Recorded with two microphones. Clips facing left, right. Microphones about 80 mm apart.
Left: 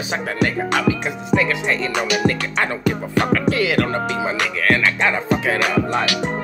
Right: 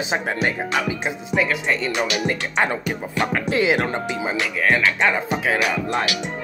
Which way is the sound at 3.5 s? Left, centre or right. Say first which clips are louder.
Left 1 dB; right.